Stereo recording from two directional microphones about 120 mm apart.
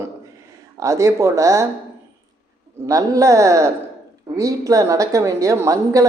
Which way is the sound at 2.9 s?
30° right (ahead or behind).